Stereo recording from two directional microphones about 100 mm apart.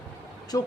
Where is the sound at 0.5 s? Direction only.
40° left (ahead or behind).